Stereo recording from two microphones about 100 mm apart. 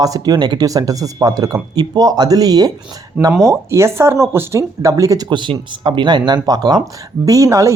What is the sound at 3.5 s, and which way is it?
Speech, 30° right (ahead or behind).